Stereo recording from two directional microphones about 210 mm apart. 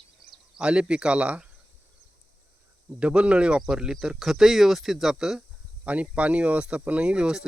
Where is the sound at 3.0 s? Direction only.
5° right (ahead or behind).